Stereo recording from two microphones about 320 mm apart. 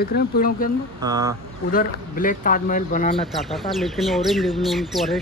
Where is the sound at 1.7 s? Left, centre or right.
Left.